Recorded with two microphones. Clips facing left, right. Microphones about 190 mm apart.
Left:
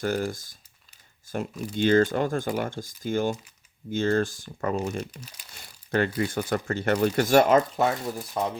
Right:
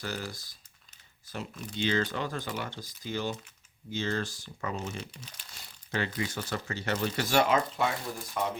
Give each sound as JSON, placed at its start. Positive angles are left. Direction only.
{"t": 0.0, "sound": "speech", "side_deg": 50}
{"t": 1.7, "sound": "speech", "side_deg": 50}